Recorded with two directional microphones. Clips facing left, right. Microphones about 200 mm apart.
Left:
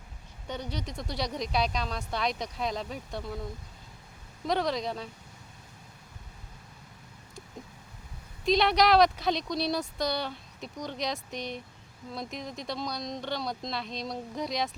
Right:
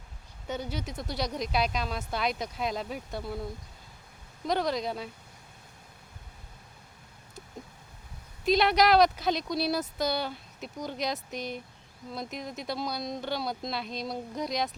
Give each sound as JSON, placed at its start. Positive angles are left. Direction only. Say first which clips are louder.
{"t": 0.4, "sound": "a woman's voice", "louder": "right 2 dB", "side_deg": -5}
{"t": 4.4, "sound": "a woman's voice", "louder": "even", "side_deg": 0}
{"t": 8.4, "sound": "a woman's voice", "louder": "even", "side_deg": 0}